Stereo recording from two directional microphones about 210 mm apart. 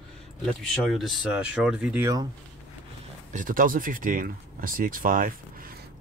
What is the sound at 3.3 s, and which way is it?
Speech, 40° right (ahead or behind).